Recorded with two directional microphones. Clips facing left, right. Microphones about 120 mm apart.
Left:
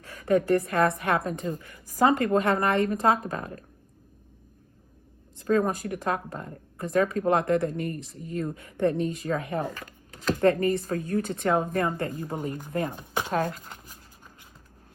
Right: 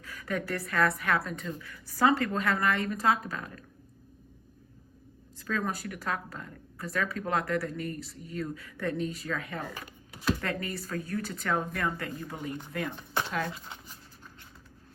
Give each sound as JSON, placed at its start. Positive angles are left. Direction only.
{"t": 0.0, "sound": "a woman's voice", "side_deg": 35}
{"t": 2.4, "sound": "speech", "side_deg": 30}
{"t": 5.5, "sound": "speech", "side_deg": 45}
{"t": 10.1, "sound": "a sound", "side_deg": -10}
{"t": 10.4, "sound": "speech", "side_deg": 40}
{"t": 13.5, "sound": "shuffling cards", "side_deg": 0}